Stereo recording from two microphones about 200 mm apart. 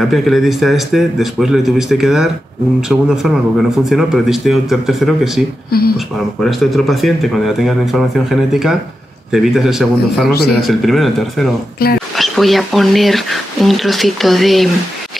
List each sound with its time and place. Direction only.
0.1 s speech: centre (ahead or behind)
5.7 s speech: 50° left (ahead or behind)
5.9 s speech: centre (ahead or behind)
10.3 s speech: 50° left (ahead or behind)
10.6 s speech: centre (ahead or behind)
11.8 s speech: 50° left (ahead or behind)
12.2 s speech: centre (ahead or behind)